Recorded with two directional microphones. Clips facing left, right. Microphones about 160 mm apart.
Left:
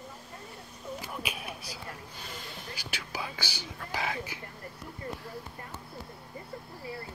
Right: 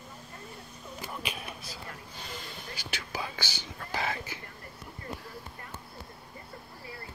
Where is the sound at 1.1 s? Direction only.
5° left (ahead or behind).